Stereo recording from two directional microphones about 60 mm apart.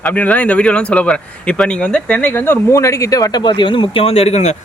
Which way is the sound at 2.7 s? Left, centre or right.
Left.